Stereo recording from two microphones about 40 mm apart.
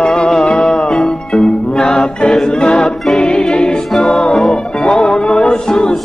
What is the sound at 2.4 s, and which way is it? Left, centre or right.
Choir, centre.